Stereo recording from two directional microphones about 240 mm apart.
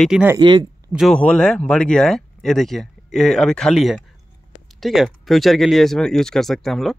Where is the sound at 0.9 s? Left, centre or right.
Centre.